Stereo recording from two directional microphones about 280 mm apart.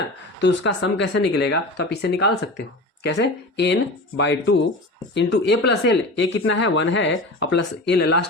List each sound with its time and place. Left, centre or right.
0.3 s speech: left
4.2 s speech: left